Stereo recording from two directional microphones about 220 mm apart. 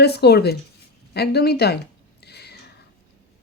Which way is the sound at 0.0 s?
45° left (ahead or behind).